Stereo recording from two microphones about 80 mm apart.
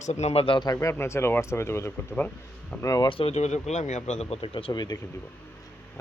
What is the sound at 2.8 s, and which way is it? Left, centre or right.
Speech, left.